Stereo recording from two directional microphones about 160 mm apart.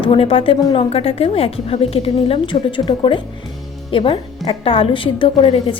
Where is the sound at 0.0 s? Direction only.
35° left (ahead or behind).